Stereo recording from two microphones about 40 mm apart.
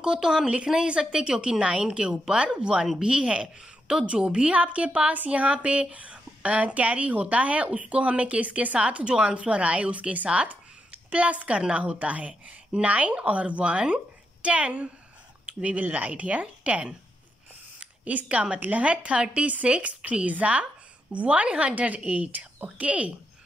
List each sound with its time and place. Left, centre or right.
0.0 s a woman's voice: centre
15.4 s a woman's voice: right
17.7 s a sound: right
18.6 s a woman's voice: right